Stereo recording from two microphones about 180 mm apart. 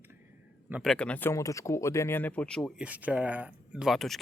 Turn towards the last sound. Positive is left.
turn(degrees=0)  # may be behind; listen again after turning